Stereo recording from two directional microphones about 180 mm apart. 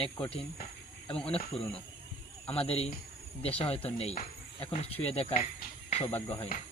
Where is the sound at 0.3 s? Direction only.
35° left (ahead or behind).